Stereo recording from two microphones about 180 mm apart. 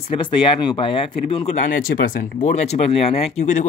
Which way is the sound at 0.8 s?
30° left (ahead or behind).